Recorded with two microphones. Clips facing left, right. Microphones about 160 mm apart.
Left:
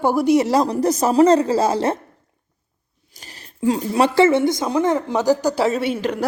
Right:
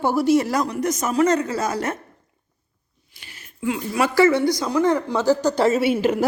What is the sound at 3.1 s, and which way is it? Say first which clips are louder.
Speech: left 5 dB; 40° left (ahead or behind).